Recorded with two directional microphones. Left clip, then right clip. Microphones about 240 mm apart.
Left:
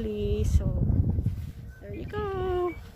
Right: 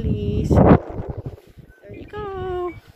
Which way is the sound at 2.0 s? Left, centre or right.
Centre.